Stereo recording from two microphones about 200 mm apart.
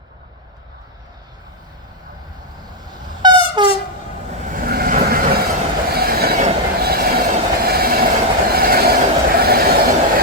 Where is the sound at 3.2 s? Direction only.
20° right (ahead or behind).